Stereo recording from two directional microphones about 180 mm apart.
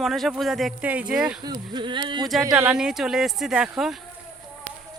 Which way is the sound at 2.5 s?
5° right (ahead or behind).